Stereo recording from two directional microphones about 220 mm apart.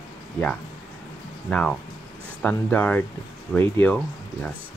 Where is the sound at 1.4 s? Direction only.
5° left (ahead or behind).